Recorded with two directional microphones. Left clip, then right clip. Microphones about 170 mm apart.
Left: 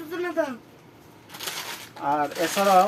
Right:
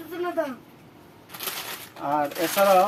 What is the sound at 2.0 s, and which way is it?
Speech, centre (ahead or behind).